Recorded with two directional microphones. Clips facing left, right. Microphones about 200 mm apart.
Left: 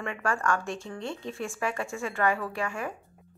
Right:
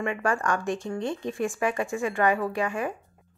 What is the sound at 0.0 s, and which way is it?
Speech, 15° right (ahead or behind).